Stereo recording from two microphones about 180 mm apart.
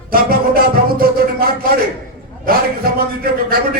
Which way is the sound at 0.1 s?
55° right (ahead or behind).